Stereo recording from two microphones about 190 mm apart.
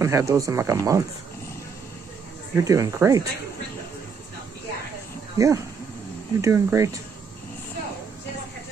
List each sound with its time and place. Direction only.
0.0 s speech: 15° right (ahead or behind)
2.5 s speech: 15° right (ahead or behind)
5.4 s speech: 15° right (ahead or behind)